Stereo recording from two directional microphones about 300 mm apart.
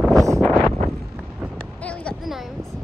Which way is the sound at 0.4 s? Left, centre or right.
Centre.